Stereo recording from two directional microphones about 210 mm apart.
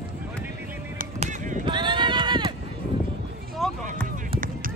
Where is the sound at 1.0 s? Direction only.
35° right (ahead or behind).